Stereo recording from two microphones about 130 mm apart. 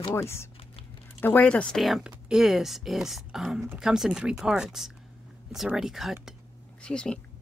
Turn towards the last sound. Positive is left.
turn(degrees=5)  # may be behind; listen again after turning